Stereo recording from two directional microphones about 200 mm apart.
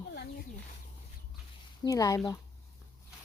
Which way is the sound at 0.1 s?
55° left (ahead or behind).